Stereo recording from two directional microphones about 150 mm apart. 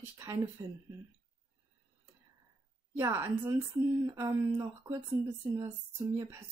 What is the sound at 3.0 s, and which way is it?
A woman's voice, 15° right (ahead or behind).